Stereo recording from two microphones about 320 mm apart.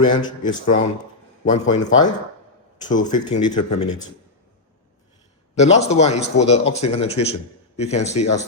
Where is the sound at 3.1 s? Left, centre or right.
Centre.